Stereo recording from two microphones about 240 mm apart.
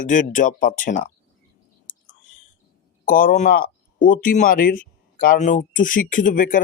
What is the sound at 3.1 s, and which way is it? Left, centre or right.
Speech, left.